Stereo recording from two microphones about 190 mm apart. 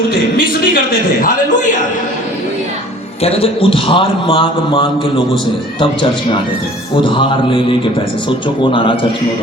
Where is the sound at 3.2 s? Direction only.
30° left (ahead or behind).